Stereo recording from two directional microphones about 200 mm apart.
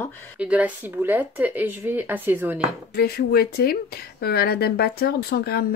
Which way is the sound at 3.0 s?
50° left (ahead or behind).